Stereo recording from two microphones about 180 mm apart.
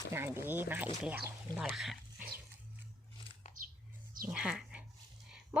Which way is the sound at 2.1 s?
55° right (ahead or behind).